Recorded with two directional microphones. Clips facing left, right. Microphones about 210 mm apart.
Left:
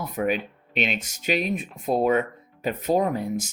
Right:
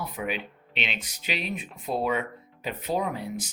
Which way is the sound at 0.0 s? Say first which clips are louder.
Left 7 dB; 45° left (ahead or behind).